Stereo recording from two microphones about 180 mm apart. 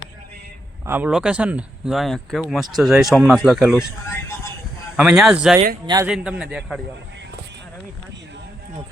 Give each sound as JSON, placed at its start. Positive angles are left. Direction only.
{"t": 0.9, "sound": "speech", "side_deg": -10}
{"t": 4.1, "sound": "a sound", "side_deg": 15}
{"t": 4.9, "sound": "speech", "side_deg": -5}
{"t": 5.8, "sound": "a man's voice", "side_deg": -20}
{"t": 6.1, "sound": "speech", "side_deg": -5}